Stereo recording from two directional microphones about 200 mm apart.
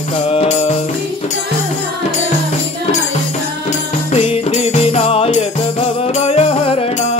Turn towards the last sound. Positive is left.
turn(degrees=30)  # may be behind; listen again after turning